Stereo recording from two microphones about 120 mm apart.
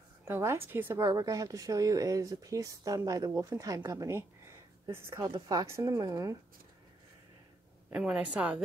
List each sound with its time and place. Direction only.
0.2 s a woman's voice: 20° right (ahead or behind)
5.3 s a woman's voice: 35° right (ahead or behind)
7.9 s a woman's voice: 10° right (ahead or behind)